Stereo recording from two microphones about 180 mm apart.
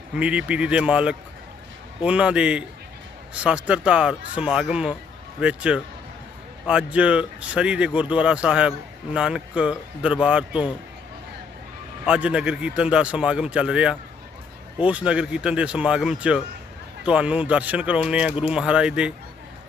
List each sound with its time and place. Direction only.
0.2 s speech: 5° right (ahead or behind)
12.0 s speech: 5° right (ahead or behind)